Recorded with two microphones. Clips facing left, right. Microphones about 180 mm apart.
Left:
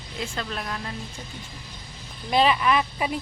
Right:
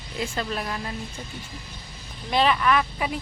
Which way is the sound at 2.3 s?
Centre (ahead or behind).